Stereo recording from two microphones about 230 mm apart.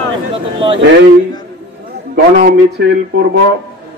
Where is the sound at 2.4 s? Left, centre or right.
Right.